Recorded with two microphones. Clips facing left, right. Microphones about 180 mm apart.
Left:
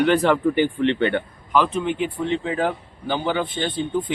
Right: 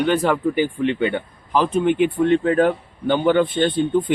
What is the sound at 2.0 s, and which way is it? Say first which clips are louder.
Speech: right 7 dB; 60° right (ahead or behind).